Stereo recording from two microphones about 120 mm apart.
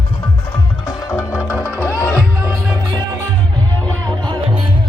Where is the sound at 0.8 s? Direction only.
25° left (ahead or behind).